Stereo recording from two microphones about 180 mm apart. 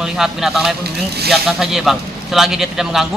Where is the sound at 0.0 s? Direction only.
Centre (ahead or behind).